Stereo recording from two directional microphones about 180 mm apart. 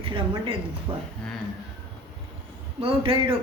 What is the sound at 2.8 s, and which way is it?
Speech, 30° right (ahead or behind).